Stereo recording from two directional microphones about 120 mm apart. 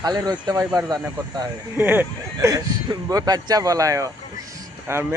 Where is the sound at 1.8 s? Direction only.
15° right (ahead or behind).